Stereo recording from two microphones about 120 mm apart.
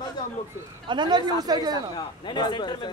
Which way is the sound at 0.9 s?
40° right (ahead or behind).